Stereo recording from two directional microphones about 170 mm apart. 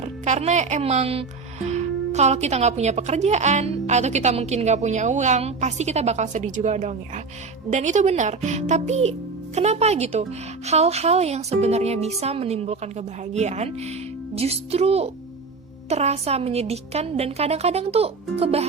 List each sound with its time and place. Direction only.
0.0 s speech: 40° right (ahead or behind)